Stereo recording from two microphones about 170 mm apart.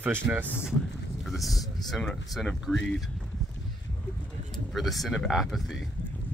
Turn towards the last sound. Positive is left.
turn(degrees=0)  # may be behind; listen again after turning